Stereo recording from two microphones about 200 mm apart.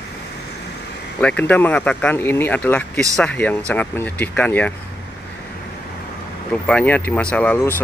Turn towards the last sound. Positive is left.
turn(degrees=10)  # may be behind; listen again after turning